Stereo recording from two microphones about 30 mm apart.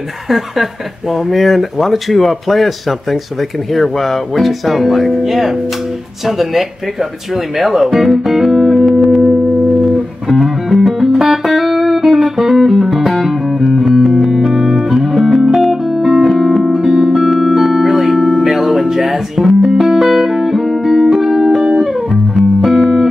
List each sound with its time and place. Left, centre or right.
0.3 s speech: centre
8.8 s music: centre
10.4 s music: centre
15.8 s music: centre
17.3 s keyboard: centre
18.4 s music: centre